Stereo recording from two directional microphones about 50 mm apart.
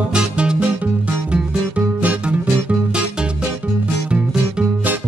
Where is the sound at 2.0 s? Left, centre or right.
Right.